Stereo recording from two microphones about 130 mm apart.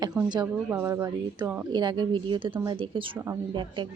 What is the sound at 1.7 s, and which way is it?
A woman's voice, 35° right (ahead or behind).